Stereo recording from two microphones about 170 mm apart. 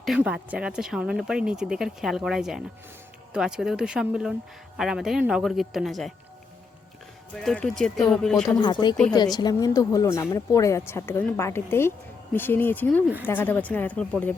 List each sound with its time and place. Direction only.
0.0 s speech: 5° right (ahead or behind)
7.3 s speech: centre (ahead or behind)
8.4 s speech: 25° left (ahead or behind); by 14.3 s 10° left (ahead or behind)